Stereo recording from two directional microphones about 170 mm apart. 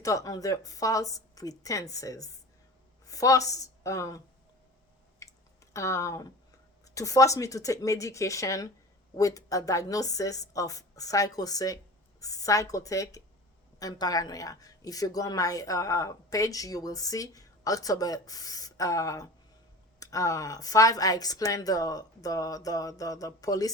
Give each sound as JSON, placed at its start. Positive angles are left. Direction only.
{"t": 0.0, "sound": "a woman's voice", "side_deg": 20}
{"t": 5.2, "sound": "a sound", "side_deg": 15}
{"t": 5.7, "sound": "a woman's voice", "side_deg": 15}